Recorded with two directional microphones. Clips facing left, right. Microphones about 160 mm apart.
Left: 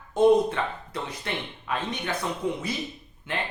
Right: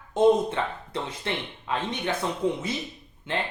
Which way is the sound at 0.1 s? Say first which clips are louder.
Left 1 dB; 20° right (ahead or behind).